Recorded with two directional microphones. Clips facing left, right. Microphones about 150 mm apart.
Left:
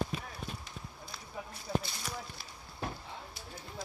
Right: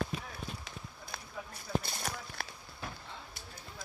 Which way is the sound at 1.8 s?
55° right (ahead or behind).